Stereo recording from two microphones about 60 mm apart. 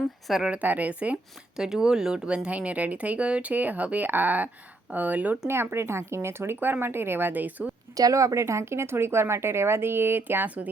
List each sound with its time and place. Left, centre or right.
0.3 s a woman's voice: centre
0.5 s speech: right
1.5 s speech: centre; by 5.4 s right
5.5 s speech: right
7.9 s speech: right